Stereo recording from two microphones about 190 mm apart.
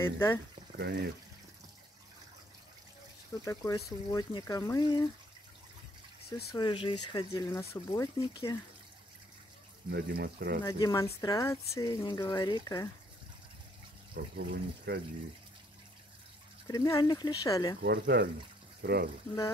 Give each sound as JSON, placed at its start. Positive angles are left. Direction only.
{"t": 0.0, "sound": "speech", "side_deg": 15}
{"t": 0.7, "sound": "speech", "side_deg": -60}
{"t": 3.4, "sound": "speech", "side_deg": 15}
{"t": 6.5, "sound": "speech", "side_deg": 25}
{"t": 9.8, "sound": "speech", "side_deg": -60}
{"t": 10.6, "sound": "speech", "side_deg": 20}
{"t": 14.1, "sound": "speech", "side_deg": -55}
{"t": 16.6, "sound": "speech", "side_deg": 20}
{"t": 17.8, "sound": "speech", "side_deg": -65}